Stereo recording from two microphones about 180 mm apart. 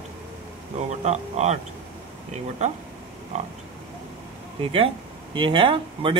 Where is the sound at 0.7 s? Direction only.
40° right (ahead or behind).